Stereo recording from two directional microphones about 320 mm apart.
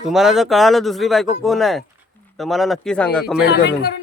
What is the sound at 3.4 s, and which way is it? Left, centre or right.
Speech, left.